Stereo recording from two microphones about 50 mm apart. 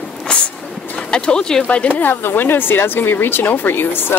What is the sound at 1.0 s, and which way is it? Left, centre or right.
Speech, left.